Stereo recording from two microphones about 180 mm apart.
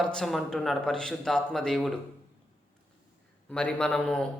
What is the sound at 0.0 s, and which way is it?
Speech, 5° left (ahead or behind).